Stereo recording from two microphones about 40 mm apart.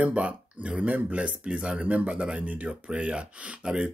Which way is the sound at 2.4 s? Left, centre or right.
Right.